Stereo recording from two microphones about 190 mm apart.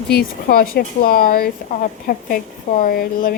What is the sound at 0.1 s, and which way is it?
Speech, 50° left (ahead or behind).